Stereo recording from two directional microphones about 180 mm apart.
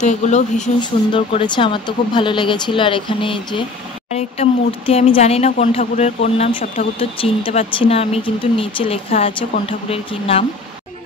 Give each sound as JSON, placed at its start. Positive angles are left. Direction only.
{"t": 0.0, "sound": "speech", "side_deg": 40}
{"t": 0.7, "sound": "speech", "side_deg": 25}